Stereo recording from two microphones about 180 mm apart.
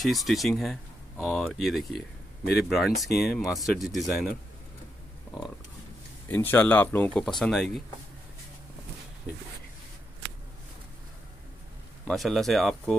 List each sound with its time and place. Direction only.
0.0 s speech: centre (ahead or behind)
6.2 s speech: 10° left (ahead or behind)
12.1 s speech: centre (ahead or behind)